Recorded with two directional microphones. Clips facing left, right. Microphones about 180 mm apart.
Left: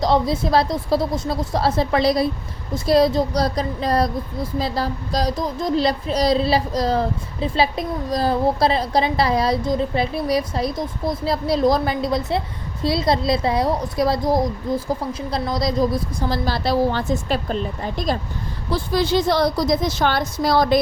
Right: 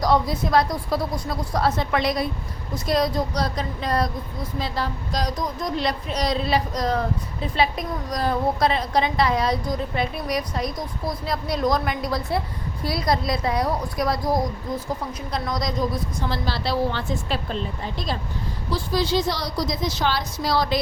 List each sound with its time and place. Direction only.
0.0 s a woman's voice: 25° left (ahead or behind)
15.3 s a woman's voice: 30° left (ahead or behind); by 20.7 s 50° left (ahead or behind)